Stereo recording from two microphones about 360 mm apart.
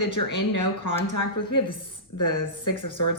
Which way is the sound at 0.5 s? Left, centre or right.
Left.